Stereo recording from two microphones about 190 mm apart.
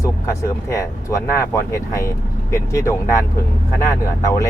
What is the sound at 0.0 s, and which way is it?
Speech, 15° left (ahead or behind).